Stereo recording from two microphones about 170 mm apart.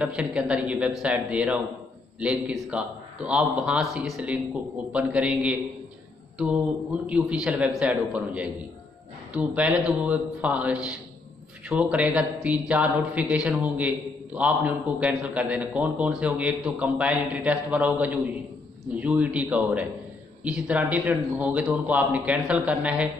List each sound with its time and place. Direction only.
0.0 s a man's voice: 5° right (ahead or behind)
7.1 s speech: 5° right (ahead or behind)